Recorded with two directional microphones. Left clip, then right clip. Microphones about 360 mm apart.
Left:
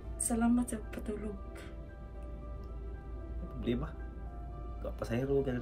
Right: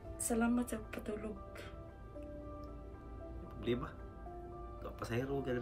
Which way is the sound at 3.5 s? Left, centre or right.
Centre.